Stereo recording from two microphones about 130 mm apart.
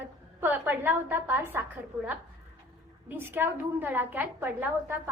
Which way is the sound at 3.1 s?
15° right (ahead or behind).